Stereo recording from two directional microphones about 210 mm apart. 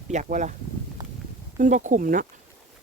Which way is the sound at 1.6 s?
35° right (ahead or behind).